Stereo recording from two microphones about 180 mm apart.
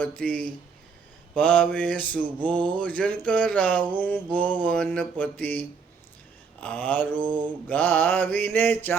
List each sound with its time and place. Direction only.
0.0 s mantra: 5° left (ahead or behind)